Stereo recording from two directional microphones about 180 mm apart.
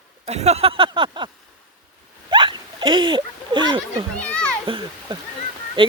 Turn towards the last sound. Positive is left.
turn(degrees=-30)  # may be behind; listen again after turning